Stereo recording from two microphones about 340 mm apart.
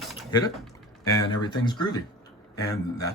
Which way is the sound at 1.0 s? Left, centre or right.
Centre.